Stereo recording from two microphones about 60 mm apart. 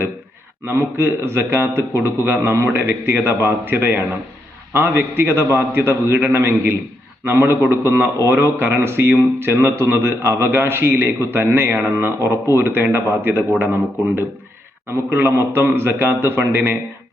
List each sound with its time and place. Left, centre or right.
0.6 s a man's voice: right